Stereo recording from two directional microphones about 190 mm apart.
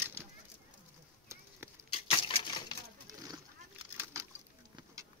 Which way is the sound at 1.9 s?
30° left (ahead or behind).